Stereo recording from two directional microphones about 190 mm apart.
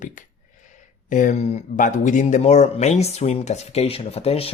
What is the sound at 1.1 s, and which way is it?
Speech, 40° left (ahead or behind).